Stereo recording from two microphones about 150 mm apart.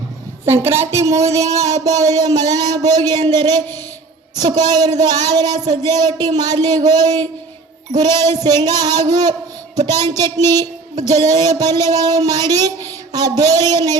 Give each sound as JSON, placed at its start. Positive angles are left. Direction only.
{"t": 0.4, "sound": "speech", "side_deg": -15}